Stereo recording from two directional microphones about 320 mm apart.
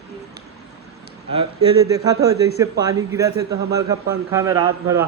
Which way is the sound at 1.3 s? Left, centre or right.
Centre.